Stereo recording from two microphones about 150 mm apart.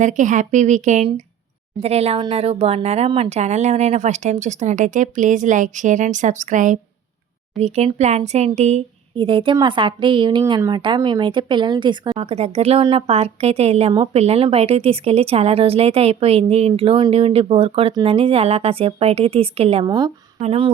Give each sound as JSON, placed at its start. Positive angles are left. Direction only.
{"t": 0.0, "sound": "speech", "side_deg": -55}
{"t": 1.8, "sound": "speech", "side_deg": -45}
{"t": 7.6, "sound": "speech", "side_deg": 0}
{"t": 7.9, "sound": "speech", "side_deg": -45}
{"t": 9.1, "sound": "speech", "side_deg": -35}
{"t": 12.2, "sound": "speech", "side_deg": -45}